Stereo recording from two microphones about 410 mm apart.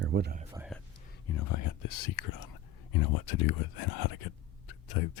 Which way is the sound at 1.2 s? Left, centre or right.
Left.